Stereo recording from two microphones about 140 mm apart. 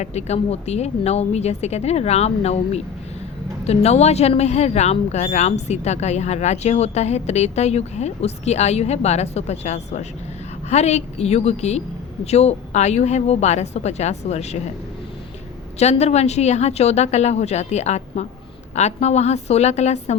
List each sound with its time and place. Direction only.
0.0 s speech: 50° left (ahead or behind)
15.8 s speech: 50° left (ahead or behind)